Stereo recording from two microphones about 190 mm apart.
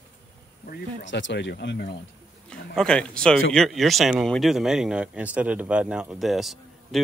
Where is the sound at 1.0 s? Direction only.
70° left (ahead or behind).